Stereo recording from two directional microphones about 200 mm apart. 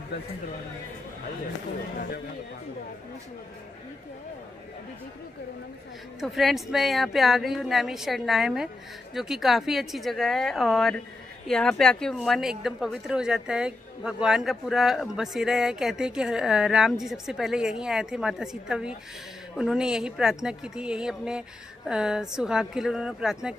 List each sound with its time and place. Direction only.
2.0 s speech: 50° left (ahead or behind)
6.2 s a woman's voice: centre (ahead or behind)